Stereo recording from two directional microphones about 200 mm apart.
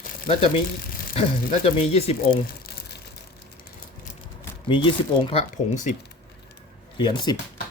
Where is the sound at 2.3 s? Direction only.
50° left (ahead or behind).